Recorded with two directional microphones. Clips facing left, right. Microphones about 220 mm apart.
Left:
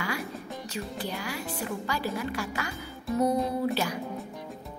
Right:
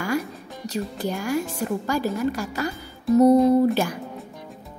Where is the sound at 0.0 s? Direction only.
40° right (ahead or behind).